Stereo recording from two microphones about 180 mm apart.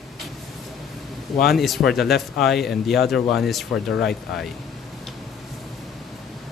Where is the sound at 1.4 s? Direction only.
Centre (ahead or behind).